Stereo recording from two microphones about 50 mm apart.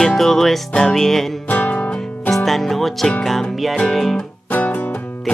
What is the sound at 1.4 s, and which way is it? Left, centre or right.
Music, left.